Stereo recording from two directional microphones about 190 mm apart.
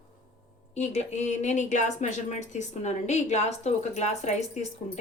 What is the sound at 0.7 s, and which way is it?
Speech, 35° left (ahead or behind).